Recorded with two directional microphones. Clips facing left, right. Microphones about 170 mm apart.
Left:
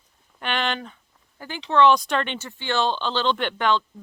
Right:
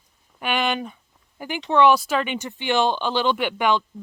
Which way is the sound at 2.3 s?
15° right (ahead or behind).